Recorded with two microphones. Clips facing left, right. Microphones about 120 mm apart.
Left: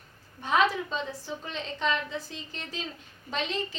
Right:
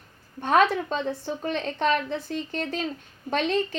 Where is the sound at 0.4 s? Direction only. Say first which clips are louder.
Right 5 dB; 55° right (ahead or behind).